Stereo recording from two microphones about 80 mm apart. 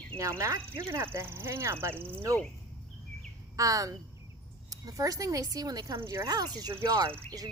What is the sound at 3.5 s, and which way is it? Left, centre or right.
Speech, right.